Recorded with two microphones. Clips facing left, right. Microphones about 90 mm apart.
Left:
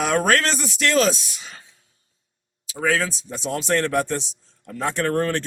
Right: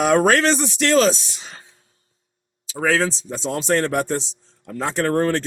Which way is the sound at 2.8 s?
25° right (ahead or behind).